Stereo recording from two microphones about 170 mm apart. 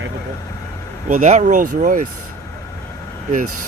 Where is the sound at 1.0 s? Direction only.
45° right (ahead or behind).